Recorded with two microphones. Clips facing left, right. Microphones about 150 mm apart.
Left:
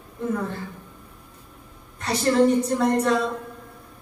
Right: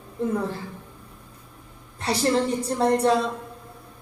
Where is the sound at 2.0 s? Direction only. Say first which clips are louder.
Left 3 dB; 30° right (ahead or behind).